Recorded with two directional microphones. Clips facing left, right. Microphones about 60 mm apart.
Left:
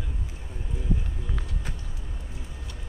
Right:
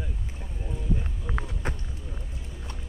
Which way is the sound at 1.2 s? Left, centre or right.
Right.